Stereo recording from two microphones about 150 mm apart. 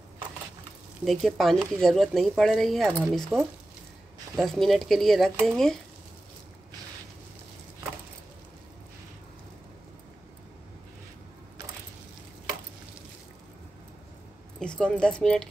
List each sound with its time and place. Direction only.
1.0 s speech: centre (ahead or behind)
14.6 s speech: 5° left (ahead or behind)